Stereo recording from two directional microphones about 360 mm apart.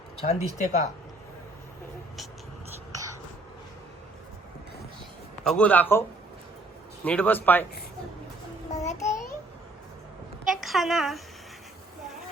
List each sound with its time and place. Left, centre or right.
0.2 s speech: centre
2.9 s a sound: centre
5.5 s speech: centre
8.8 s babbling: centre
10.4 s a woman's voice: centre